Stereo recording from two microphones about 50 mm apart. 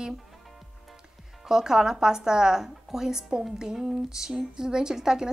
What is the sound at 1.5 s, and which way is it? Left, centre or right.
A woman's voice, centre.